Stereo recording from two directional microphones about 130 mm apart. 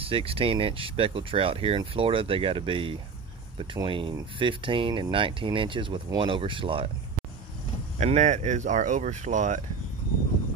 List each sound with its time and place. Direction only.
0.0 s speech: 45° right (ahead or behind)
8.0 s speech: 65° right (ahead or behind)